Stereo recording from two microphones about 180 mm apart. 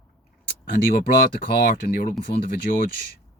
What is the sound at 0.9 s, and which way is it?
Speech, 50° left (ahead or behind).